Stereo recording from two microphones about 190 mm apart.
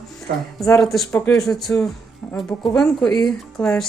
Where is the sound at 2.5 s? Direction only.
15° left (ahead or behind).